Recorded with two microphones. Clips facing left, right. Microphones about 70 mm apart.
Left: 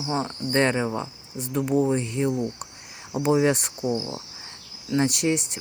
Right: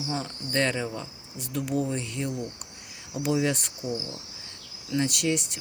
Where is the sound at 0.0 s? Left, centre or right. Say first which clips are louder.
Left 5 dB; left.